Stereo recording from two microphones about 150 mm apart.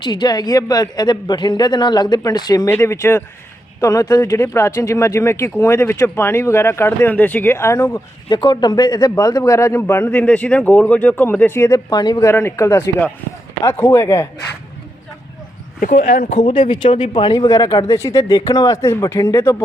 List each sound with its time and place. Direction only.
0.0 s speech: 30° left (ahead or behind)
2.6 s speech: 15° left (ahead or behind)
8.3 s speech: 30° left (ahead or behind)
12.3 s speech: 15° left (ahead or behind)
15.8 s speech: 75° left (ahead or behind)
16.3 s speech: 35° left (ahead or behind); by 19.6 s 20° left (ahead or behind)